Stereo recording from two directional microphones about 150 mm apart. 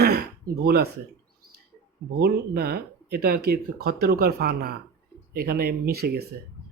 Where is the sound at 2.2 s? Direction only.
90° right.